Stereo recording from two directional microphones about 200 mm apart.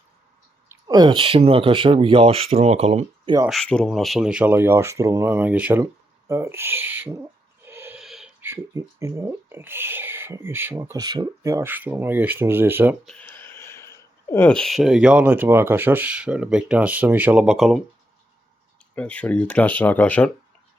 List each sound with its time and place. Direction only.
0.7 s speech: 20° right (ahead or behind)
3.5 s speech: 5° left (ahead or behind)
7.6 s snort: 10° right (ahead or behind)
8.0 s speech: centre (ahead or behind)
13.1 s speech: 5° left (ahead or behind)
18.9 s speech: 5° left (ahead or behind)